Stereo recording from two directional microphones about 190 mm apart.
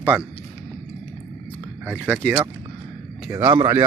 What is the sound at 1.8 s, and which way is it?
Speech, 10° right (ahead or behind).